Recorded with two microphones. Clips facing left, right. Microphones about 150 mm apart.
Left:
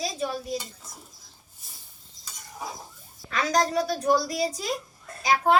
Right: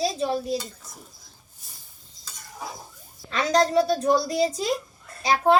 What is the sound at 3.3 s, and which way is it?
A woman's voice, 25° right (ahead or behind).